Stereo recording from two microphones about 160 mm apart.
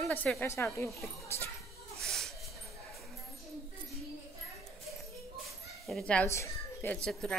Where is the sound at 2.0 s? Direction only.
Centre (ahead or behind).